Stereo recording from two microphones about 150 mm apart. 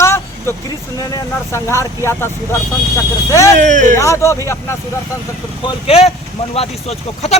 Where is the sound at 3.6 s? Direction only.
60° right (ahead or behind).